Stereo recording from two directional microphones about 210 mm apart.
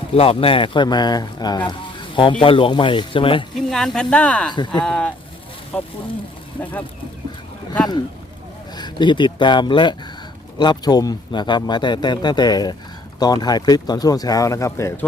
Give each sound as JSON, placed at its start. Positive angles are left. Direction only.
{"t": 0.1, "sound": "speech", "side_deg": 25}
{"t": 3.7, "sound": "speech", "side_deg": 0}
{"t": 4.5, "sound": "speech", "side_deg": 20}
{"t": 4.8, "sound": "speech", "side_deg": 5}
{"t": 8.7, "sound": "speech", "side_deg": 20}